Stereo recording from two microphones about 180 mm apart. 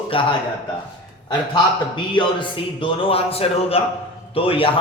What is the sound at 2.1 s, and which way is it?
A man's voice, 30° left (ahead or behind).